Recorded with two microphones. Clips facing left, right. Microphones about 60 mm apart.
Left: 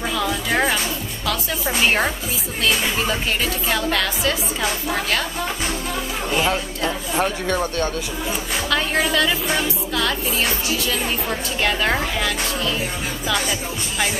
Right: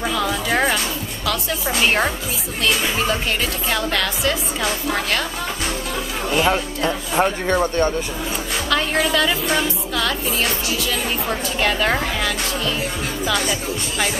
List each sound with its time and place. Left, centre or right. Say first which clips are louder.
0.0 s music: right 1 dB; centre
6.3 s speech: right 3 dB; centre
7.6 s speech: right 4 dB; right
8.6 s music: right 1 dB; centre